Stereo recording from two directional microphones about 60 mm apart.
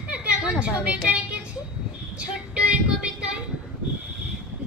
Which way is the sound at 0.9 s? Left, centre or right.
Right.